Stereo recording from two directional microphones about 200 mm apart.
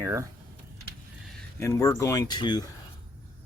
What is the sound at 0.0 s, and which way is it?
Speech, 15° right (ahead or behind).